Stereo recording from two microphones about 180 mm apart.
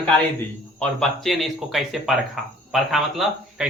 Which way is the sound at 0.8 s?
Centre (ahead or behind).